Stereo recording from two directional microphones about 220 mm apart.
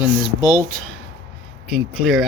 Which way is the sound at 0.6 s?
5° left (ahead or behind).